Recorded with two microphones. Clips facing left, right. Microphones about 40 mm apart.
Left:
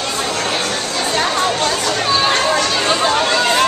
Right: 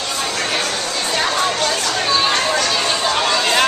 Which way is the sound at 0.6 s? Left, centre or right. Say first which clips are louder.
Left 1 dB; centre.